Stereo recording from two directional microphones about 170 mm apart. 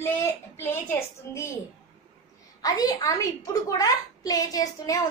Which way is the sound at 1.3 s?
15° left (ahead or behind).